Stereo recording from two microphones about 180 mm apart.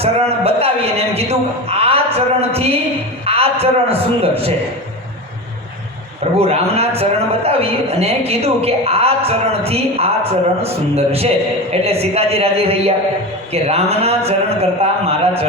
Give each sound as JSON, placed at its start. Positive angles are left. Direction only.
{"t": 0.0, "sound": "a man's voice", "side_deg": -35}
{"t": 6.4, "sound": "a man's voice", "side_deg": -35}